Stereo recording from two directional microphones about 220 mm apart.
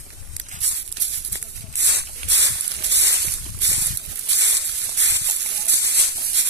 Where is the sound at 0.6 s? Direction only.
55° right (ahead or behind).